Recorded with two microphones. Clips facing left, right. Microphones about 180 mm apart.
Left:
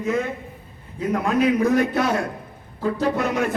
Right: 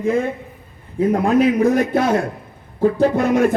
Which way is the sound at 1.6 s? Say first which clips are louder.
Right 3 dB; 50° right (ahead or behind).